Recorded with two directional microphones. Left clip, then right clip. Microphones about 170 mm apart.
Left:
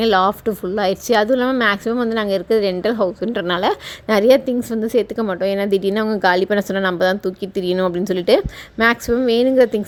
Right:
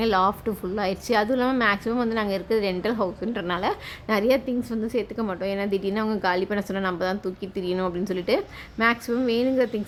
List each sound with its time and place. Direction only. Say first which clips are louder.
0.0 s a woman's voice: left 6 dB; 35° left (ahead or behind)